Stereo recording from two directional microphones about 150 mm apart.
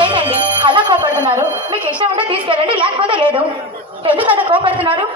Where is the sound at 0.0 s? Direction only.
35° right (ahead or behind).